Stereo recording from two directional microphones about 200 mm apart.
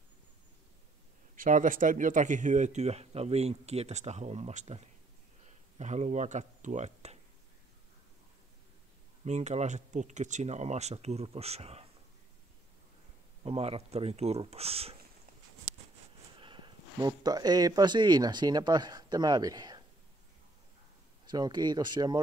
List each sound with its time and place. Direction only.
1.3 s speech: 40° right (ahead or behind)
9.2 s speech: 35° right (ahead or behind)
13.4 s speech: 30° right (ahead or behind)
16.3 s speech: 25° right (ahead or behind)
21.3 s speech: 20° right (ahead or behind)